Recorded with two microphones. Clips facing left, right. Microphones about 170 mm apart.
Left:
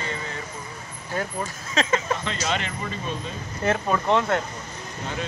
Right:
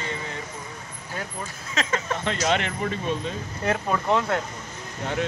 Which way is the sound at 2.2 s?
60° right (ahead or behind).